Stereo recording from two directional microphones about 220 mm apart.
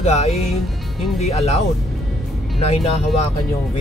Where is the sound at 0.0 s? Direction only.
30° left (ahead or behind).